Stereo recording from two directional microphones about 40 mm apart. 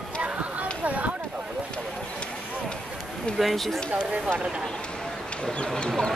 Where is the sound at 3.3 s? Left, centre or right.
Centre.